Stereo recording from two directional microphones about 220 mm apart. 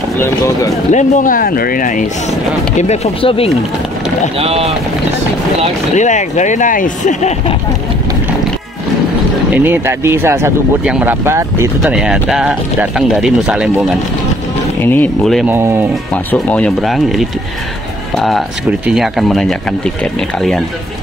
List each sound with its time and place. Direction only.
0.9 s speech: 35° left (ahead or behind)
4.4 s speech: 25° right (ahead or behind)
5.9 s speech: 35° left (ahead or behind)
9.6 s speech: 10° right (ahead or behind)
14.8 s speech: 10° left (ahead or behind)
15.5 s speech: 10° right (ahead or behind)
16.3 s speech: 5° left (ahead or behind)